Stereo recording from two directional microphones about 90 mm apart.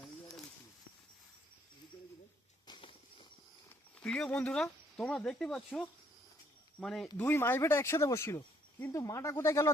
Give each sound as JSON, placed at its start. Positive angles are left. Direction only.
{"t": 2.6, "sound": "a sound", "side_deg": 65}
{"t": 4.0, "sound": "speech", "side_deg": 10}
{"t": 6.8, "sound": "speech", "side_deg": 5}
{"t": 7.2, "sound": "speech", "side_deg": 25}